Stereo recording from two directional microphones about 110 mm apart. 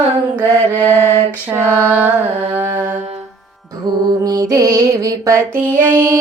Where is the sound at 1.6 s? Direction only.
20° left (ahead or behind).